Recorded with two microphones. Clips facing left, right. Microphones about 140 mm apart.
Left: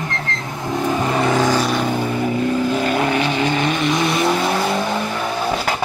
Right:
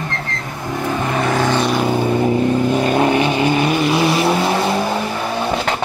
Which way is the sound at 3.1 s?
15° right (ahead or behind).